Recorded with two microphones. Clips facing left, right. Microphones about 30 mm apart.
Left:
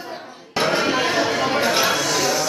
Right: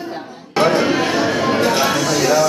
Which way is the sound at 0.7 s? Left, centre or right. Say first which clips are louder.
Right 3 dB; centre.